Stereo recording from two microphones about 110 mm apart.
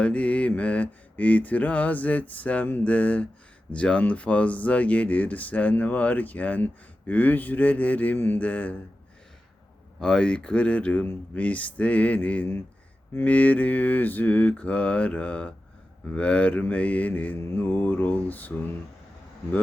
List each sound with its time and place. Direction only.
0.0 s mantra: 10° left (ahead or behind)
10.0 s mantra: 5° left (ahead or behind)